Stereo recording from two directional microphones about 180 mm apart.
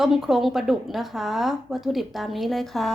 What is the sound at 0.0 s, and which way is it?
A woman's voice, centre (ahead or behind).